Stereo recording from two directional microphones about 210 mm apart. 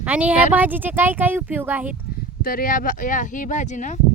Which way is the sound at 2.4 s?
40° left (ahead or behind).